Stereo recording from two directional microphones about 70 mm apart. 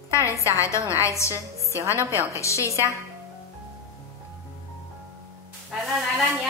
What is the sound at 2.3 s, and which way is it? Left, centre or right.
Speech, left.